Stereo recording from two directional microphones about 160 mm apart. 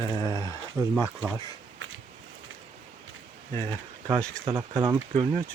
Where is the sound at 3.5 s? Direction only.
15° left (ahead or behind).